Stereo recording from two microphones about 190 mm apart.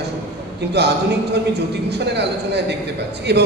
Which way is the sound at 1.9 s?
65° right (ahead or behind).